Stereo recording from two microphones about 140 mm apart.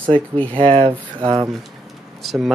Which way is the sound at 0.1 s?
40° right (ahead or behind).